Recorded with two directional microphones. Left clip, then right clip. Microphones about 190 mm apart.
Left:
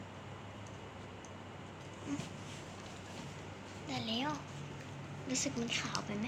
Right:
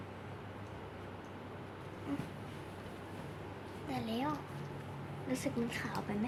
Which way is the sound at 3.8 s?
25° right (ahead or behind).